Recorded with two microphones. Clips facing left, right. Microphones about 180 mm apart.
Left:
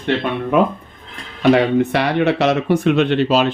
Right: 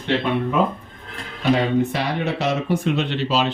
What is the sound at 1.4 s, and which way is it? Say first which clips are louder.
Speech: left 5 dB; 70° left (ahead or behind).